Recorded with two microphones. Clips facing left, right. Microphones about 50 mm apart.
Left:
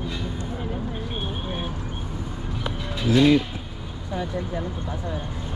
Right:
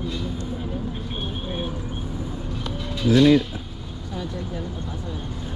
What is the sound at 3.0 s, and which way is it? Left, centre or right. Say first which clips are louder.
Speech: right 2 dB; centre.